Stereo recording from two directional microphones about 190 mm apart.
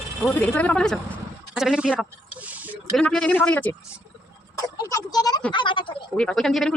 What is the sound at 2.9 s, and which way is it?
Speech, 5° left (ahead or behind).